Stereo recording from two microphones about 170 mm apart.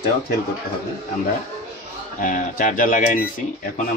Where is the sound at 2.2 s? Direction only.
50° left (ahead or behind).